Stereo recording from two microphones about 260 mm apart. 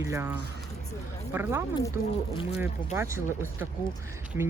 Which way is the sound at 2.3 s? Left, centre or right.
Centre.